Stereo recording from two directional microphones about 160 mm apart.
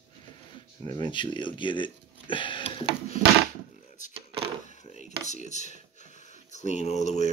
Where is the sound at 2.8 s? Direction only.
90° right.